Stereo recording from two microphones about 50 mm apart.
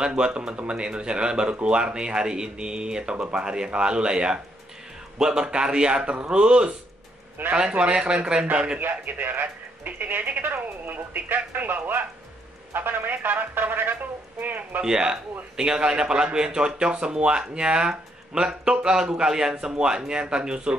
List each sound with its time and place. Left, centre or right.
0.0 s a man's voice: centre
8.7 s speech: right
14.8 s a man's voice: centre